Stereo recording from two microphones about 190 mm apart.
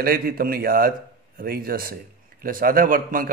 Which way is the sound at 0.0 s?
50° right (ahead or behind).